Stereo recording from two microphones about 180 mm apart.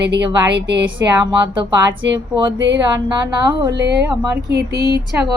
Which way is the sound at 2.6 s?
90° right.